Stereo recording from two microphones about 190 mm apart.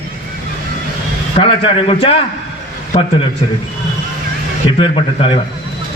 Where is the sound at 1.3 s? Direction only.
30° left (ahead or behind).